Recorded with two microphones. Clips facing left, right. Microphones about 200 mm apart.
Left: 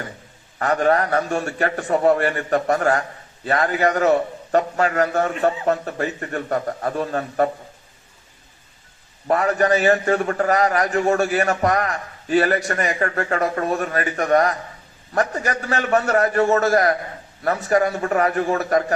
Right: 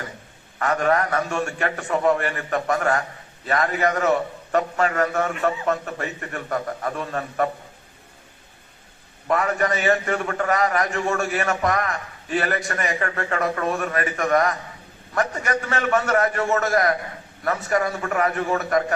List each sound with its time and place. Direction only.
0.6 s a man's voice: 35° left (ahead or behind)
9.2 s a man's voice: 35° left (ahead or behind)